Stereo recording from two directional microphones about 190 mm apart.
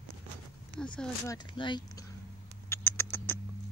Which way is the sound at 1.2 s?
25° left (ahead or behind).